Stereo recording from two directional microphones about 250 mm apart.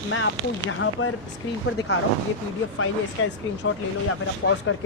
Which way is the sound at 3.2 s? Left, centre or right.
Left.